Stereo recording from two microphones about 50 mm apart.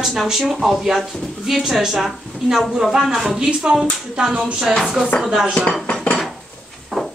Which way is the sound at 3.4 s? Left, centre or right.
Centre.